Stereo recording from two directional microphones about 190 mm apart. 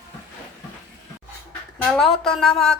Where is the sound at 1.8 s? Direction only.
Centre (ahead or behind).